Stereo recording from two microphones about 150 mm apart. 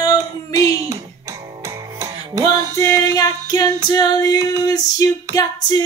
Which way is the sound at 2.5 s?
20° left (ahead or behind).